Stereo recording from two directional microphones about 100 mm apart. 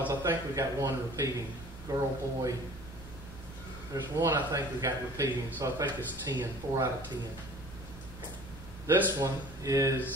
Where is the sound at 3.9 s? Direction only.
35° right (ahead or behind).